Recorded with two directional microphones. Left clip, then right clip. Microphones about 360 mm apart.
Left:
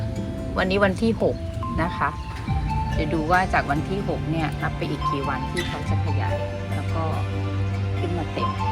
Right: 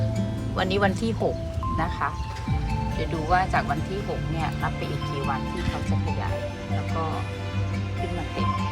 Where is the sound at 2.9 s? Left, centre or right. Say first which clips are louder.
Left 2 dB; centre.